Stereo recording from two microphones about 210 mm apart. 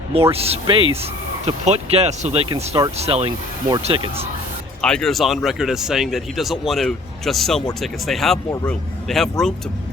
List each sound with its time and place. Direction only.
0.1 s speech: 30° right (ahead or behind)
4.8 s speech: 5° left (ahead or behind)